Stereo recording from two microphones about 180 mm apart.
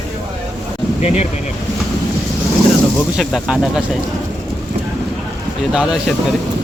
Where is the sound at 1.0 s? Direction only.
35° left (ahead or behind).